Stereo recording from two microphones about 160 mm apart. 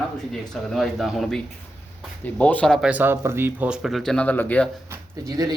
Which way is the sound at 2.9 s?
10° right (ahead or behind).